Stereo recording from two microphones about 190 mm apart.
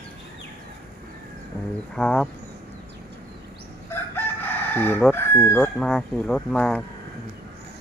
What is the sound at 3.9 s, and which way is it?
Chicken, 10° left (ahead or behind).